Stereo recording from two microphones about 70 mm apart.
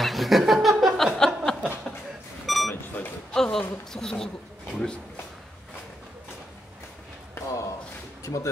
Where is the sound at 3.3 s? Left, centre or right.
Centre.